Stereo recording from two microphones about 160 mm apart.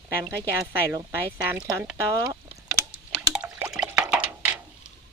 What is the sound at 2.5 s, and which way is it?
Drip, 10° right (ahead or behind).